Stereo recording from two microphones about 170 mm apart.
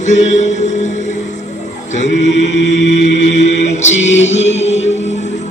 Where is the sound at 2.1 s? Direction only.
90° left.